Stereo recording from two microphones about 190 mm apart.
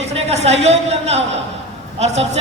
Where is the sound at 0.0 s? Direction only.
35° right (ahead or behind).